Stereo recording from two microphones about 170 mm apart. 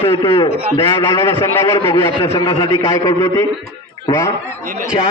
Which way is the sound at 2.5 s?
25° left (ahead or behind).